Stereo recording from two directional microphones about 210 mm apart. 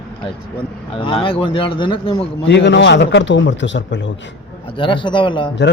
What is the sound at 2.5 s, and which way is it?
A man's voice, 55° left (ahead or behind).